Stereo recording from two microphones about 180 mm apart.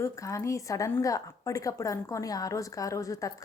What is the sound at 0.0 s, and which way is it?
A woman's voice, 15° left (ahead or behind).